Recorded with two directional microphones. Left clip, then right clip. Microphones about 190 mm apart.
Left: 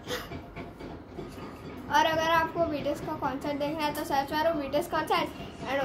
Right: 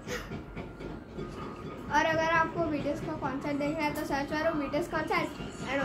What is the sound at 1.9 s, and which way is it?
A child's voice, 15° left (ahead or behind).